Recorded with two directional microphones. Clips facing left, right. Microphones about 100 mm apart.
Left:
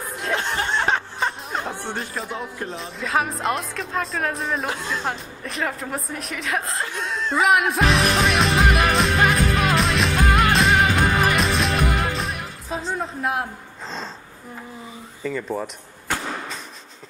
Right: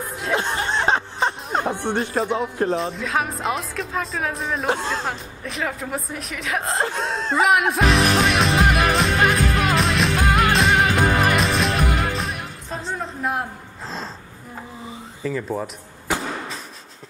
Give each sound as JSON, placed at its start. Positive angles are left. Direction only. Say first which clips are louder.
{"t": 0.0, "sound": "chuckle", "louder": "right 1 dB", "side_deg": 0}
{"t": 0.3, "sound": "chuckle", "louder": "right 2 dB", "side_deg": -15}
{"t": 0.8, "sound": "a sound", "louder": "right 2 dB", "side_deg": -20}
{"t": 1.7, "sound": "music", "louder": "right 6 dB", "side_deg": -60}
{"t": 2.2, "sound": "speech", "louder": "right 8 dB", "side_deg": -40}
{"t": 2.7, "sound": "speech", "louder": "right 2 dB", "side_deg": 0}
{"t": 4.6, "sound": "speech", "louder": "right 4 dB", "side_deg": -30}
{"t": 5.0, "sound": "speech", "louder": "even", "side_deg": 0}
{"t": 6.6, "sound": "speech", "louder": "right 5 dB", "side_deg": -30}
{"t": 7.3, "sound": "music", "louder": "even", "side_deg": 0}
{"t": 15.2, "sound": "speech", "louder": "right 1 dB", "side_deg": 0}